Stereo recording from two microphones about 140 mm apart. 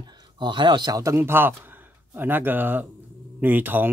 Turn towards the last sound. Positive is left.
turn(degrees=-15)  # may be behind; listen again after turning